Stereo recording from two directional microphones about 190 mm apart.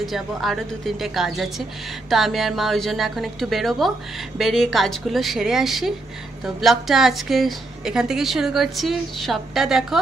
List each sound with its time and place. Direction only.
0.0 s a woman's voice: centre (ahead or behind)